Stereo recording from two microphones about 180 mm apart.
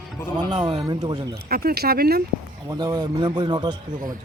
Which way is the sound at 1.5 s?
60° right (ahead or behind).